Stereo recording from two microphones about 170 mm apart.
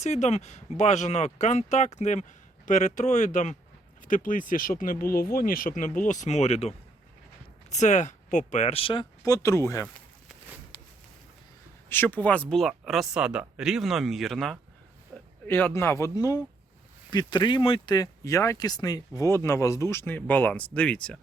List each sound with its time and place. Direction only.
0.0 s speech: 40° left (ahead or behind); by 9.8 s 15° left (ahead or behind)
11.9 s speech: 10° left (ahead or behind)